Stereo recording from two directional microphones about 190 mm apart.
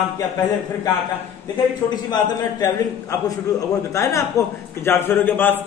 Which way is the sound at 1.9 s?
20° left (ahead or behind).